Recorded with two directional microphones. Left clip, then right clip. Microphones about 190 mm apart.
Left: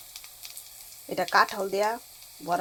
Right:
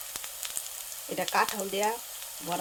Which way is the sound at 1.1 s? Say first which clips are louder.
Left 5 dB; 15° left (ahead or behind).